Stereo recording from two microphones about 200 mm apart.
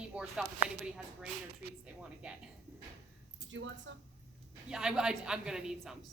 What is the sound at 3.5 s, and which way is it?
Speech, 70° right (ahead or behind).